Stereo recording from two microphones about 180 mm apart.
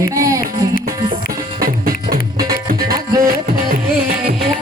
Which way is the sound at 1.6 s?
55° right (ahead or behind).